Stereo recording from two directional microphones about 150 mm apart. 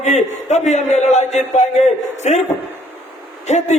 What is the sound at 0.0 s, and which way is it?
A man's voice, 50° left (ahead or behind).